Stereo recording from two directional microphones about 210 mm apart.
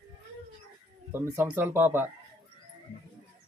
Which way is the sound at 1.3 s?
10° right (ahead or behind).